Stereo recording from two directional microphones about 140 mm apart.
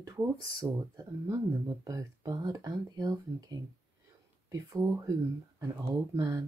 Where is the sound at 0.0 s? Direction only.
25° right (ahead or behind).